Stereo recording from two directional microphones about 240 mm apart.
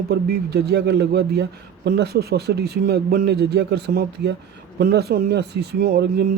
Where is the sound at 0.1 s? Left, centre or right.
Right.